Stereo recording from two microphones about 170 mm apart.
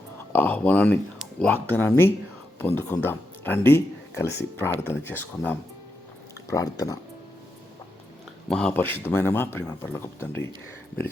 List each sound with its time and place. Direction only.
0.3 s speech: 10° left (ahead or behind)
8.4 s speech: 5° left (ahead or behind)